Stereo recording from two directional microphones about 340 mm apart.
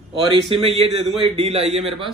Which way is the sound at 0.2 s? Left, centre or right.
Centre.